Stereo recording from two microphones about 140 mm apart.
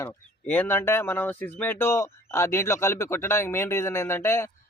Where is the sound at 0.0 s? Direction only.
15° left (ahead or behind).